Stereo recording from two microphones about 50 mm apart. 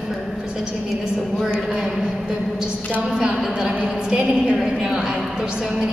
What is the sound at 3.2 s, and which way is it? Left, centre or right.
A woman's voice, centre.